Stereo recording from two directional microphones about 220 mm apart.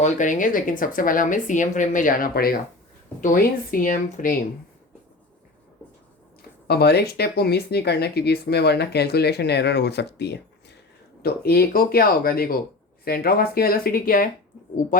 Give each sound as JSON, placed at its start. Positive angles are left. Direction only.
{"t": 0.0, "sound": "speech", "side_deg": 35}
{"t": 6.7, "sound": "speech", "side_deg": 45}